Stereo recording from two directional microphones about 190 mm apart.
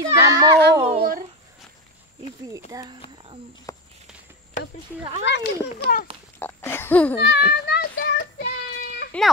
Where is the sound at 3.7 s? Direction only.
15° left (ahead or behind).